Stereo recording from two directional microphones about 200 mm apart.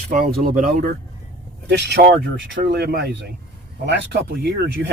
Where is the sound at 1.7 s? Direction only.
55° right (ahead or behind).